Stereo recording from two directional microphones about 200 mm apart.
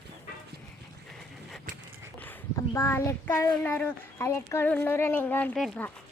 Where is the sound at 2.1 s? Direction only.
10° left (ahead or behind).